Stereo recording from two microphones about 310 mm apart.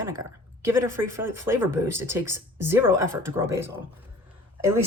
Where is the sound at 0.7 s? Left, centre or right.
Centre.